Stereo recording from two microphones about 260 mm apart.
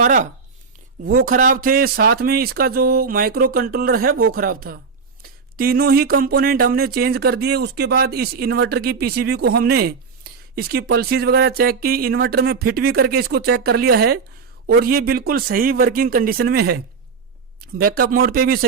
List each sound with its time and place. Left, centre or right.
0.0 s speech: right